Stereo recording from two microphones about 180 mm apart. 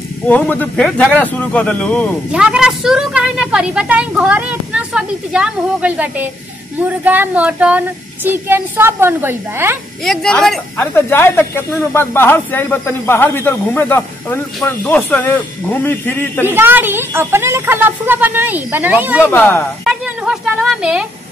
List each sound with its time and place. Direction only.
0.3 s speech: 10° left (ahead or behind)
2.3 s a woman's voice: 5° right (ahead or behind)
10.0 s a woman's voice: 5° left (ahead or behind)
16.4 s speech: 10° right (ahead or behind)
19.8 s a sound: 5° right (ahead or behind)